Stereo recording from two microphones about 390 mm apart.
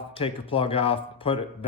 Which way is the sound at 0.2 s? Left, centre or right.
Centre.